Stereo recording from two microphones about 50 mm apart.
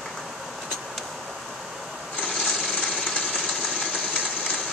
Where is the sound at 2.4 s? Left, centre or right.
Centre.